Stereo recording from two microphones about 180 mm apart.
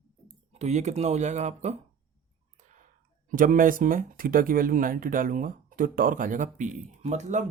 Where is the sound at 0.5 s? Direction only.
40° right (ahead or behind).